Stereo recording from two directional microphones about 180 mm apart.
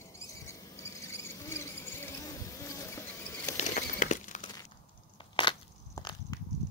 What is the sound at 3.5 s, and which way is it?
Crumpling, 45° left (ahead or behind).